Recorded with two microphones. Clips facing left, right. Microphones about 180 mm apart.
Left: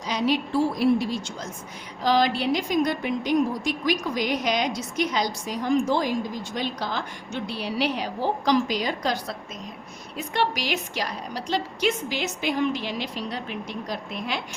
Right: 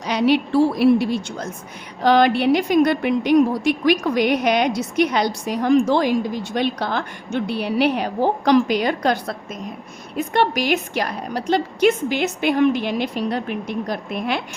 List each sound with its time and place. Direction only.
0.0 s a woman's voice: 70° right (ahead or behind)